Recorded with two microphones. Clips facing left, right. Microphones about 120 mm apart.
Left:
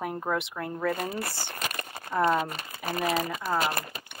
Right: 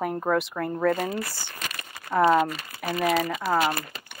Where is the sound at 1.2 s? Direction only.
55° left (ahead or behind).